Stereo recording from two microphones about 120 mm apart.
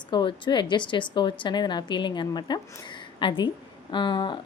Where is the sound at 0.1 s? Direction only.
40° left (ahead or behind).